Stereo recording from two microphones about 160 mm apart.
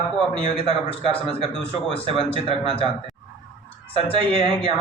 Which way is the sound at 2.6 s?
30° right (ahead or behind).